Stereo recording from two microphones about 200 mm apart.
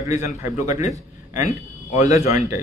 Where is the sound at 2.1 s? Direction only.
15° right (ahead or behind).